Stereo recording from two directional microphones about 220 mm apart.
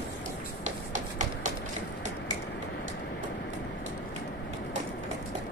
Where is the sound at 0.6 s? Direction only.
35° right (ahead or behind).